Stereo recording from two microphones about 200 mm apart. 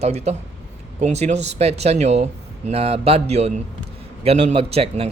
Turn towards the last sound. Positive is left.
turn(degrees=-30)  # may be behind; listen again after turning